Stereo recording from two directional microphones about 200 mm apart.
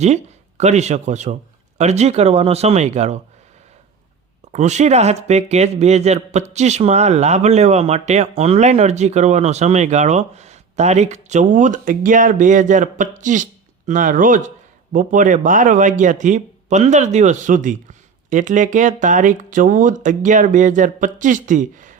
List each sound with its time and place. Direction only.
0.0 s speech: 35° right (ahead or behind)
4.5 s speech: 35° right (ahead or behind)